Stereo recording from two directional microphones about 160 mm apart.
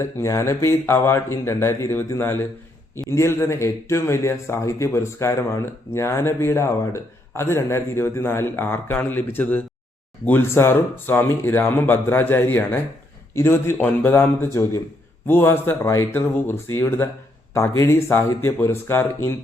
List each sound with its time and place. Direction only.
0.0 s speech: 15° left (ahead or behind)